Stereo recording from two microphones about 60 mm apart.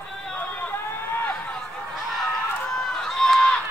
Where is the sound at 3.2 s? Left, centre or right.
Centre.